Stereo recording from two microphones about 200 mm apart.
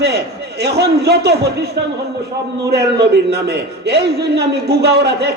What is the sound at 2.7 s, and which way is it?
A man's voice, 55° right (ahead or behind).